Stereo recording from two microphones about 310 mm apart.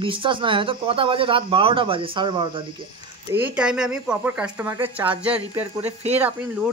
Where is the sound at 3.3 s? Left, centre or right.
Centre.